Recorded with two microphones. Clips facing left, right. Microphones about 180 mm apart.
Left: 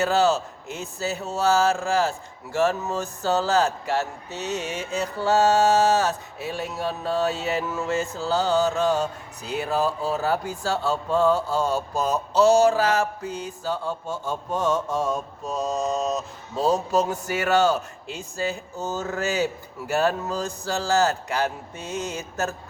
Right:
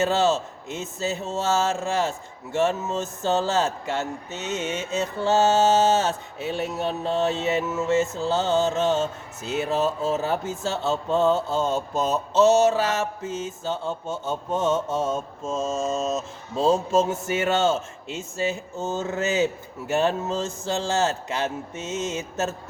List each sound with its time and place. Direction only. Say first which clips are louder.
0.0 s speech: left 1 dB; 20° right (ahead or behind)